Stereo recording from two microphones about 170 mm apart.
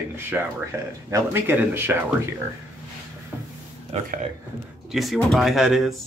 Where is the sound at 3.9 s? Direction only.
40° right (ahead or behind).